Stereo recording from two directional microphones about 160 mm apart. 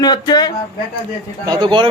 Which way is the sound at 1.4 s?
25° right (ahead or behind).